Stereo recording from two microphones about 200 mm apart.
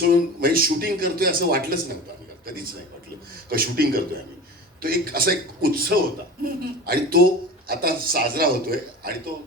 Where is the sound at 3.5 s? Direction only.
50° right (ahead or behind).